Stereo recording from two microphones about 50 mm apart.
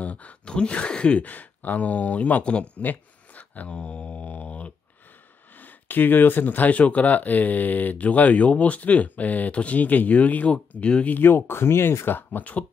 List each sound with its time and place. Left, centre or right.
0.0 s speech: left
2.8 s a sound: left
5.6 s speech: left
11.1 s speech: left